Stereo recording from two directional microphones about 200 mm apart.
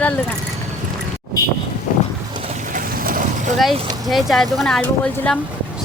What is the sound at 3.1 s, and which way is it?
Boat, 45° right (ahead or behind).